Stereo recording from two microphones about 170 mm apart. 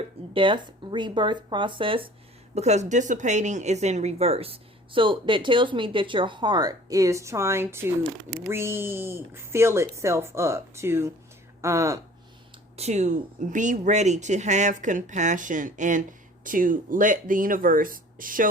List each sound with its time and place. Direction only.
0.3 s speech: 30° right (ahead or behind)
2.6 s speech: 40° right (ahead or behind); by 11.9 s 15° right (ahead or behind)
12.7 s speech: 40° right (ahead or behind)